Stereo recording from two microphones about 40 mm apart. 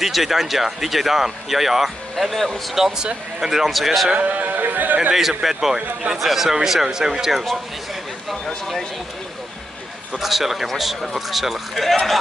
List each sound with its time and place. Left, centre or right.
0.0 s speech: centre
2.7 s speech: centre
4.1 s speech: right
5.1 s speech: centre
10.1 s speech: centre